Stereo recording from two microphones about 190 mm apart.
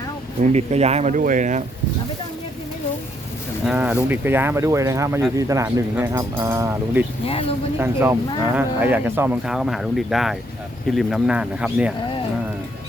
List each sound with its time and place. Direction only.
0.5 s speech: 35° right (ahead or behind)
3.7 s speech: 5° right (ahead or behind)
7.3 s speech: 30° left (ahead or behind)
7.8 s speech: 15° right (ahead or behind)